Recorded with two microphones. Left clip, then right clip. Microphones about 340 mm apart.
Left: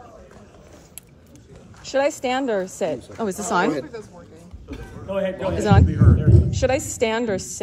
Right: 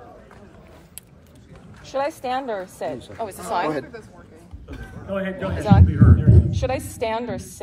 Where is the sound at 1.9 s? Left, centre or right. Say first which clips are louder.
Left 4 dB; left.